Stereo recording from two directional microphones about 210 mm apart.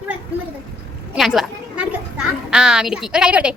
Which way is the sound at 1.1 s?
Centre (ahead or behind).